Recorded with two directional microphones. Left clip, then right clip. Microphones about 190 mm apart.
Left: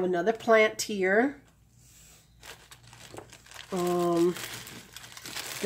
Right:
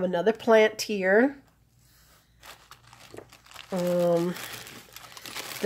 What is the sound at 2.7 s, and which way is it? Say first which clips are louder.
Crumpling: right 1 dB; 20° right (ahead or behind).